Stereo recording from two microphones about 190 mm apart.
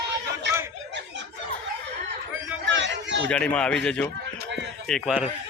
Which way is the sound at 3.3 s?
5° left (ahead or behind).